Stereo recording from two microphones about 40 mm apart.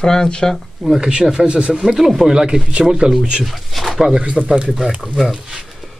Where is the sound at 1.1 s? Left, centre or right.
Centre.